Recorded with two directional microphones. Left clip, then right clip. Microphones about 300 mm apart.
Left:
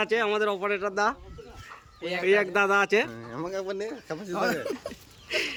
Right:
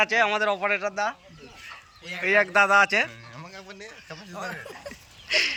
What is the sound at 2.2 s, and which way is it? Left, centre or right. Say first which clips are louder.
Speech: right 3 dB; centre.